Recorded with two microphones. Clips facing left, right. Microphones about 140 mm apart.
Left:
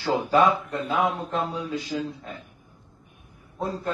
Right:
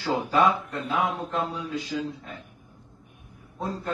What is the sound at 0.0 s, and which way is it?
A man's voice, centre (ahead or behind).